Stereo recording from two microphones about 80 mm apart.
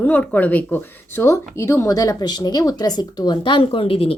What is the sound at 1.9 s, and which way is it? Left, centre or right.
Speech, left.